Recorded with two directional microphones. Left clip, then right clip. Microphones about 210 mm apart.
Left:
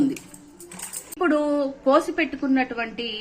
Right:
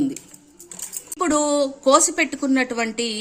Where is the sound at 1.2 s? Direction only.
55° right (ahead or behind).